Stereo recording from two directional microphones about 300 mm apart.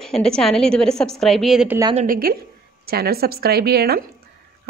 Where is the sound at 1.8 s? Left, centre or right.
Centre.